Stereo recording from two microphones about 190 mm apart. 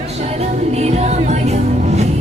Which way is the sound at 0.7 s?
35° right (ahead or behind).